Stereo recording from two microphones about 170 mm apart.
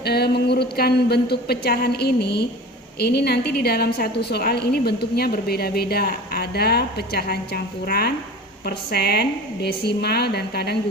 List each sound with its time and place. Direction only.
0.0 s a woman's voice: 70° left (ahead or behind)